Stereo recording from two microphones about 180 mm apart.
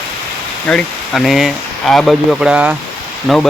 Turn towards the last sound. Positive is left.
turn(degrees=0)  # may be behind; listen again after turning